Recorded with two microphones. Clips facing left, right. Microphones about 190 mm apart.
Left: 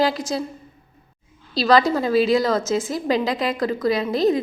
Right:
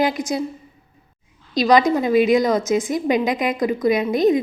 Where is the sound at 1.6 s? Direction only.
15° right (ahead or behind).